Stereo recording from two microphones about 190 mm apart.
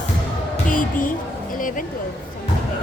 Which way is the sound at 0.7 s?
45° left (ahead or behind).